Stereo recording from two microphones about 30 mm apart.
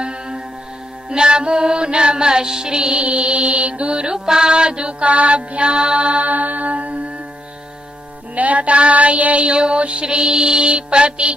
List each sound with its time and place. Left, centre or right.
0.0 s music: right
2.9 s music: right
4.1 s music: right
6.2 s mantra: right
8.4 s child singing: right
9.4 s music: right